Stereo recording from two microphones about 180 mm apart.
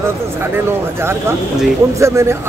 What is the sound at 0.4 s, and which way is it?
A man's voice, 15° right (ahead or behind).